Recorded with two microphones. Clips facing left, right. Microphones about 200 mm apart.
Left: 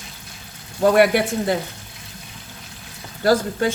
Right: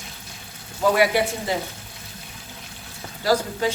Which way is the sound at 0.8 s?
55° left (ahead or behind).